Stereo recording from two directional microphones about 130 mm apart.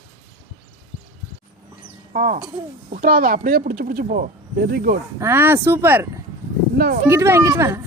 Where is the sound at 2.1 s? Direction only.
90° right.